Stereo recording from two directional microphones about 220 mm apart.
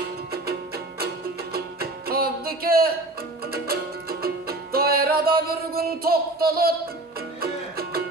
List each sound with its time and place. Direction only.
0.3 s music: 45° right (ahead or behind)